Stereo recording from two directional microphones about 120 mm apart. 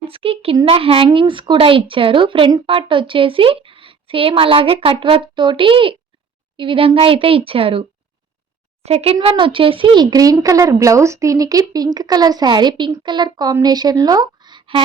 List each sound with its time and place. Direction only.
0.1 s a sound: 50° right (ahead or behind)
0.6 s a woman's voice: 50° right (ahead or behind)
8.8 s a woman's voice: 60° right (ahead or behind)
9.2 s speech: 45° right (ahead or behind)